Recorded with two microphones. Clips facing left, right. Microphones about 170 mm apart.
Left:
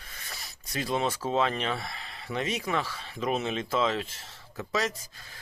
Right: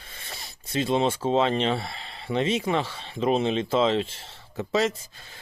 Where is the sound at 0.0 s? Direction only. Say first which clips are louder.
Right 3 dB; 25° right (ahead or behind).